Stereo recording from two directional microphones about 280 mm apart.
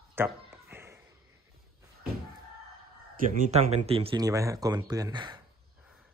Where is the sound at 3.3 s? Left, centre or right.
Right.